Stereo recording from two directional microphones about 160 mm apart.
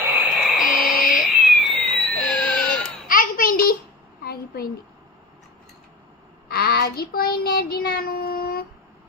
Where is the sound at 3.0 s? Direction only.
60° left (ahead or behind).